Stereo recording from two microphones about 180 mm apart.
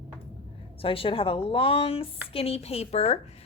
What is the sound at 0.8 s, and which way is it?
Speech, 30° left (ahead or behind).